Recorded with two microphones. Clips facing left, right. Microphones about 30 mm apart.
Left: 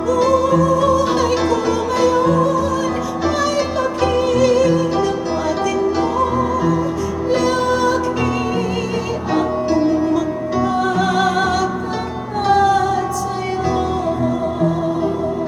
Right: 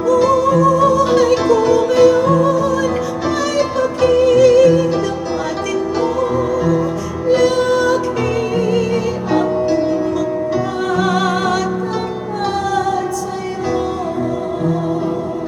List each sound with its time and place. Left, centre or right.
0.1 s music: centre